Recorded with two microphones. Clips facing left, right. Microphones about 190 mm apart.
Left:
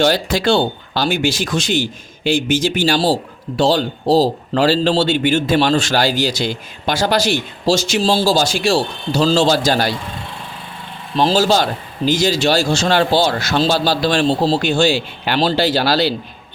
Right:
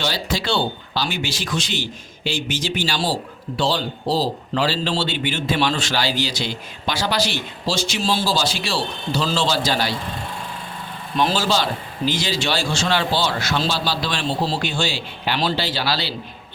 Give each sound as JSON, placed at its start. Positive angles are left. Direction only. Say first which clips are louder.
{"t": 0.0, "sound": "speech", "louder": "left 9 dB", "side_deg": 50}
{"t": 11.2, "sound": "a man's voice", "louder": "left 6 dB", "side_deg": 30}
{"t": 11.4, "sound": "speech", "louder": "left 5 dB", "side_deg": 45}